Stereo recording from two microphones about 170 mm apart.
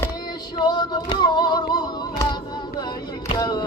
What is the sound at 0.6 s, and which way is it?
Music, 25° left (ahead or behind).